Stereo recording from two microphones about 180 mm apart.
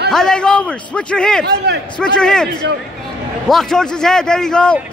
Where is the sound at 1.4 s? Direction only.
65° right (ahead or behind).